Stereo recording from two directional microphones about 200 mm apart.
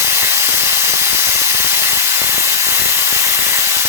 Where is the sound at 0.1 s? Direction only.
10° right (ahead or behind).